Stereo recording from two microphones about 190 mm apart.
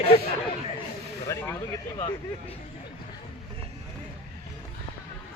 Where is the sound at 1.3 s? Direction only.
15° left (ahead or behind).